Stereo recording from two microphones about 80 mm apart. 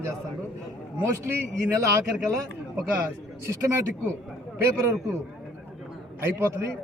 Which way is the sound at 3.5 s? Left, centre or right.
Right.